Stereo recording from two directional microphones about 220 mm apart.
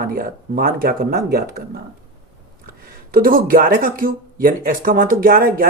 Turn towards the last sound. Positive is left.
turn(degrees=-40)  # may be behind; listen again after turning